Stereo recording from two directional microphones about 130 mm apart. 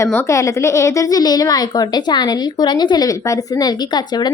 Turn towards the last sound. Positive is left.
turn(degrees=35)  # may be behind; listen again after turning